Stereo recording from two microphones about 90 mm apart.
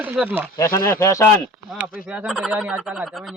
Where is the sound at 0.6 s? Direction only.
35° left (ahead or behind).